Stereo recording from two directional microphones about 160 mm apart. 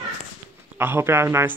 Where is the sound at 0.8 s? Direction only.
15° right (ahead or behind).